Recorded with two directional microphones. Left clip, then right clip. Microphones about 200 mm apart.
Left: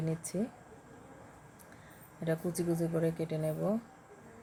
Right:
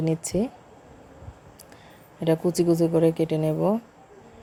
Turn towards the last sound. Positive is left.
turn(degrees=-35)  # may be behind; listen again after turning